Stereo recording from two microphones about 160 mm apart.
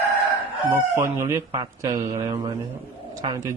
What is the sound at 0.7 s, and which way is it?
Speech, 15° right (ahead or behind).